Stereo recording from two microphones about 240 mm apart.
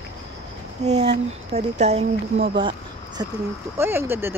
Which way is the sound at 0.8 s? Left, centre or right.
Right.